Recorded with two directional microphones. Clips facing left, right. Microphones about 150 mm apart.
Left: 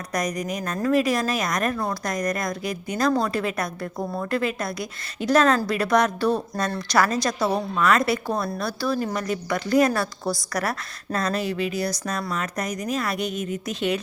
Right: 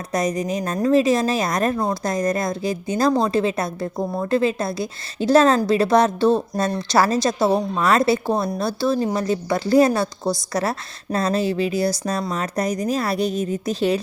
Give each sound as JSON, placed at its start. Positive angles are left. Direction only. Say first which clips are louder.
{"t": 0.1, "sound": "a woman's voice", "louder": "right 5 dB", "side_deg": -25}